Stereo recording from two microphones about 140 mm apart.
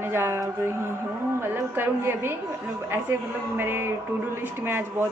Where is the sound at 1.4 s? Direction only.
15° right (ahead or behind).